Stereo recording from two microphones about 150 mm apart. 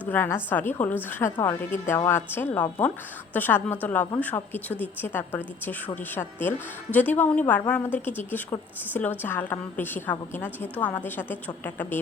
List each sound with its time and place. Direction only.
0.1 s a woman's voice: 15° left (ahead or behind)